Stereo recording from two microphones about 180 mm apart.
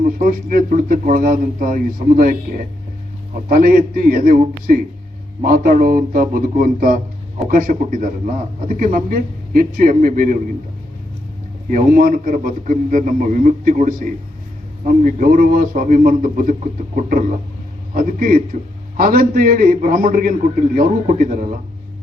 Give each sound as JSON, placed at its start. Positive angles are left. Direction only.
{"t": 0.0, "sound": "speech", "side_deg": -50}
{"t": 11.7, "sound": "speech", "side_deg": -50}